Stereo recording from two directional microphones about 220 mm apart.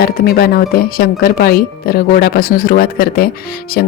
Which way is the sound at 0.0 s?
45° left (ahead or behind).